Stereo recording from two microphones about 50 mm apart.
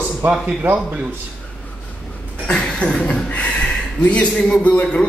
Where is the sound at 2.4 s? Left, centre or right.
Left.